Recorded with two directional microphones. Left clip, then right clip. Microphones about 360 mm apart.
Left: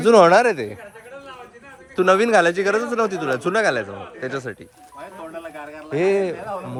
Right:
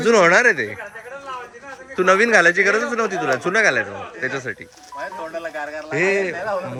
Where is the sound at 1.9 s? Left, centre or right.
Centre.